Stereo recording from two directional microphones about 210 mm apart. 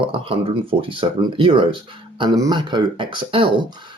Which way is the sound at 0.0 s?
25° right (ahead or behind).